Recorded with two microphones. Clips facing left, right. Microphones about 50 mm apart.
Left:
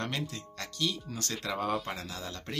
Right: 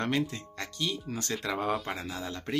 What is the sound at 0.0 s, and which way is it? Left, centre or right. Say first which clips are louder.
Speech: right 6 dB; right.